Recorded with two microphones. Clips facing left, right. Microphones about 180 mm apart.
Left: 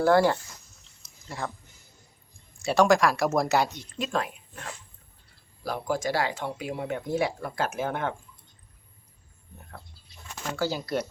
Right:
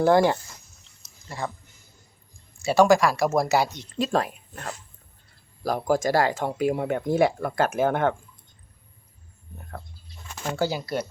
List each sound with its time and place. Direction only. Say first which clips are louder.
0.0 s speech: right 2 dB; 20° right (ahead or behind)
1.0 s a sound: right 2 dB; centre (ahead or behind)
2.6 s speech: right 3 dB; 5° right (ahead or behind)
3.9 s speech: right 6 dB; 35° right (ahead or behind); by 8.1 s 55° right (ahead or behind)
10.5 s speech: right 2 dB; 15° right (ahead or behind)